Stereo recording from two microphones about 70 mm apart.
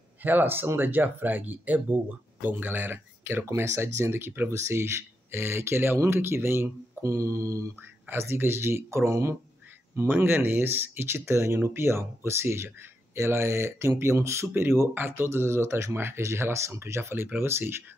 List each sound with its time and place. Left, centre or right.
0.2 s speech: right
3.5 s speech: right
7.1 s mantra: right
8.1 s speech: right
9.9 s speech: right